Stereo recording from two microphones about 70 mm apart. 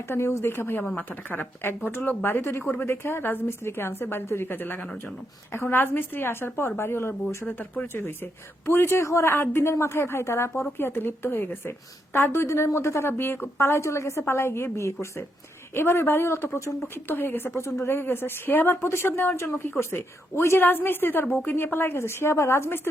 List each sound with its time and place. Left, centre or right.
0.1 s a woman's voice: left
8.6 s a woman's voice: left
17.1 s a woman's voice: left